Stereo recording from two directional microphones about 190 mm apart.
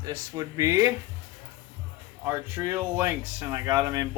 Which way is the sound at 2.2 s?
10° right (ahead or behind).